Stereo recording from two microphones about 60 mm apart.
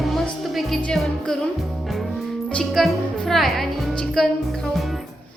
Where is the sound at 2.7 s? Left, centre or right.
Centre.